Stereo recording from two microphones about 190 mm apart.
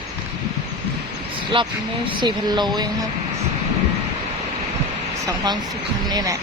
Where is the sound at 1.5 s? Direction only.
25° right (ahead or behind).